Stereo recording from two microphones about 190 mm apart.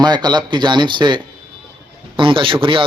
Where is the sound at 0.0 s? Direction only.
20° right (ahead or behind).